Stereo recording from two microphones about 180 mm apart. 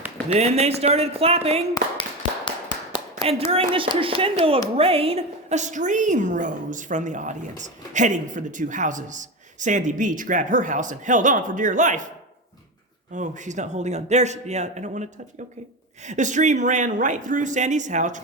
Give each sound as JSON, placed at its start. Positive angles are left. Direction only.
{"t": 0.3, "sound": "a man's voice", "side_deg": -35}
{"t": 1.7, "sound": "tap", "side_deg": 25}
{"t": 3.2, "sound": "a man's voice", "side_deg": -35}
{"t": 13.1, "sound": "a man's voice", "side_deg": -45}